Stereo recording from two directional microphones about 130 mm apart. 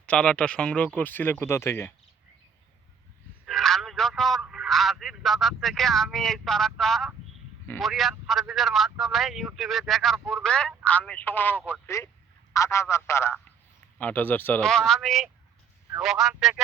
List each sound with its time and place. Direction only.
0.0 s speech: 10° left (ahead or behind)
3.4 s telephone: centre (ahead or behind)
4.4 s speech: centre (ahead or behind); by 14.6 s 15° left (ahead or behind)
14.6 s speech: 5° left (ahead or behind)